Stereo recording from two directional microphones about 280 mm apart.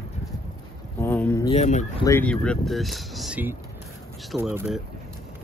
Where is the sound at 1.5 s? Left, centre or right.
Left.